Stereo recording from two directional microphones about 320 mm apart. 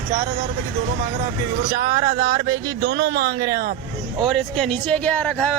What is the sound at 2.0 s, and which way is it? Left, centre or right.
Speech, centre.